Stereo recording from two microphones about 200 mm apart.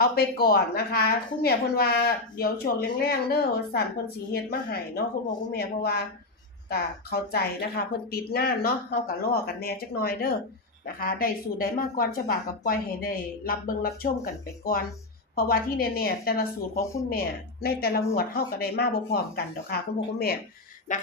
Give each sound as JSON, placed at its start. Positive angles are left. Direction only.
{"t": 0.0, "sound": "a woman's voice", "side_deg": 50}
{"t": 20.9, "sound": "music", "side_deg": 40}